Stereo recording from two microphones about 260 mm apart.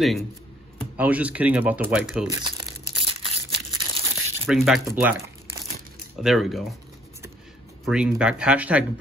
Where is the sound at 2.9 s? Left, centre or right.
Centre.